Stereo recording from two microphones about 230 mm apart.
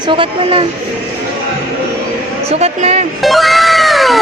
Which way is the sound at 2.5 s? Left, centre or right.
Right.